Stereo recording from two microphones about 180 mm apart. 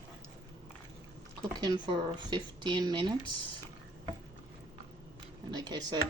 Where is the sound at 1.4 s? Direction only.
25° right (ahead or behind).